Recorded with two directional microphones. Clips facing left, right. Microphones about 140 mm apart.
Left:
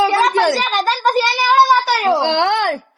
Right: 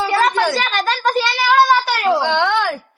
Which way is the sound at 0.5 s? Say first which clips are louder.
Left 2 dB; centre (ahead or behind).